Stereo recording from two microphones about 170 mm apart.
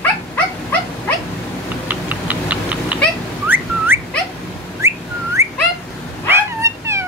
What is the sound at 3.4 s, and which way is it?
Whistling, 10° right (ahead or behind).